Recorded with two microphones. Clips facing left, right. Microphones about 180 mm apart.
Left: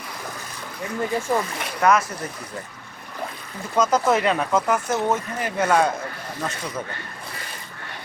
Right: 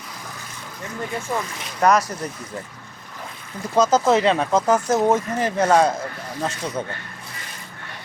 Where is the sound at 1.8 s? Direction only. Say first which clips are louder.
Right 1 dB; 40° right (ahead or behind).